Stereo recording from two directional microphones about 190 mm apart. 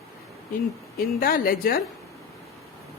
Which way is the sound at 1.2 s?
50° left (ahead or behind).